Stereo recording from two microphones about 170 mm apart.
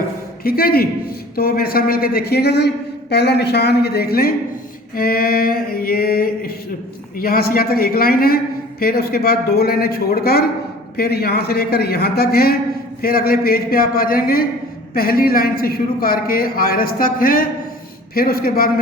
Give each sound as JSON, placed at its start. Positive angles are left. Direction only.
{"t": 0.4, "sound": "a man's voice", "side_deg": 60}